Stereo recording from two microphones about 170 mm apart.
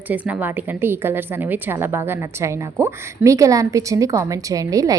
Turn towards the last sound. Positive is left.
turn(degrees=-20)  # may be behind; listen again after turning